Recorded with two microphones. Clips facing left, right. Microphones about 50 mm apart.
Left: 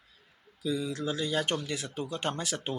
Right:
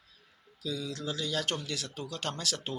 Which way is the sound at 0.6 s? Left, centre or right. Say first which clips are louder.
Left 5 dB; left.